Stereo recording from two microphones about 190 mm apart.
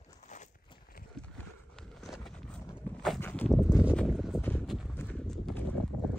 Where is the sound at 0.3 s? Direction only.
40° left (ahead or behind).